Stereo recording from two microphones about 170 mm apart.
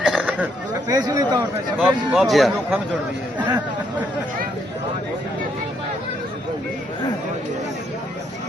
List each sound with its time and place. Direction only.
0.0 s a sound: centre (ahead or behind)
0.9 s speech: 20° right (ahead or behind)
1.8 s speech: centre (ahead or behind)